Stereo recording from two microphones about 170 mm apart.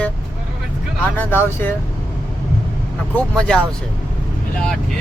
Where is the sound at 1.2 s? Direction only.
10° left (ahead or behind).